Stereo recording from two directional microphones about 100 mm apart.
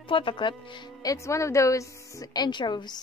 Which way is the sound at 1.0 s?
35° left (ahead or behind).